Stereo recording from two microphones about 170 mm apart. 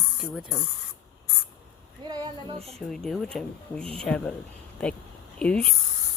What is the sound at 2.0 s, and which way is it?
Speech, 25° right (ahead or behind).